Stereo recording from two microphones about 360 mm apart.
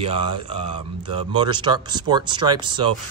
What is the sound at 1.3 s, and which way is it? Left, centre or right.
Speech, centre.